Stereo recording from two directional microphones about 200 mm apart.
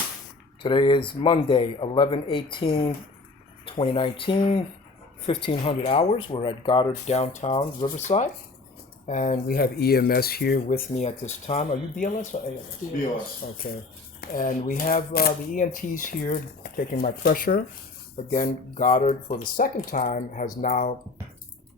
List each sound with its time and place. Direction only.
0.6 s speech: 25° left (ahead or behind)